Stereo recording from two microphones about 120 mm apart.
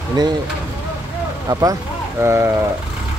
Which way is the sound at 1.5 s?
30° right (ahead or behind).